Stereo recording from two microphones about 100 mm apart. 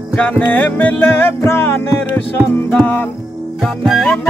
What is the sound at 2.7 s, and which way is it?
Speech, 15° left (ahead or behind).